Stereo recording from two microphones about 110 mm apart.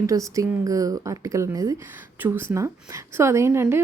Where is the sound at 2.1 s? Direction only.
20° right (ahead or behind).